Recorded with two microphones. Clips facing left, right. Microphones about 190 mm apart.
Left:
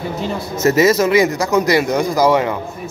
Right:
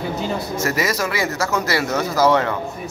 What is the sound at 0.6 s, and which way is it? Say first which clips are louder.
Speech: left 11 dB; 25° left (ahead or behind).